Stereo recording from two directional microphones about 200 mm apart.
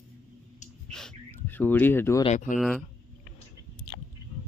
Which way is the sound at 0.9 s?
5° left (ahead or behind).